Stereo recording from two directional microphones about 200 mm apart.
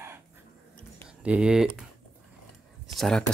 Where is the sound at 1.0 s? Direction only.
5° right (ahead or behind).